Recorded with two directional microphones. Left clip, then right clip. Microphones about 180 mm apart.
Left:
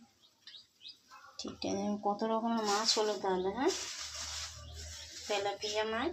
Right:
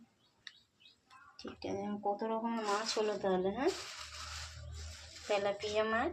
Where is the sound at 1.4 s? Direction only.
25° left (ahead or behind).